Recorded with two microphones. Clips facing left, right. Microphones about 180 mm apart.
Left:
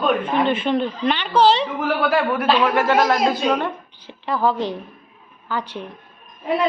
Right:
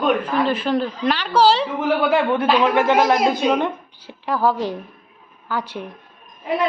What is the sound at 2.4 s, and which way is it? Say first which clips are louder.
A woman's voice: even; 20° right (ahead or behind).